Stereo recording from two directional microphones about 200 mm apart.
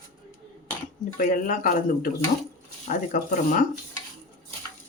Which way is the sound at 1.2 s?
40° left (ahead or behind).